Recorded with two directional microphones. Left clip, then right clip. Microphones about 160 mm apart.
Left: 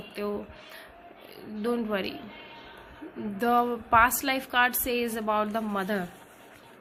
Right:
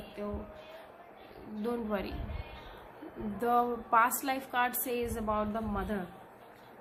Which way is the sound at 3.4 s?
30° left (ahead or behind).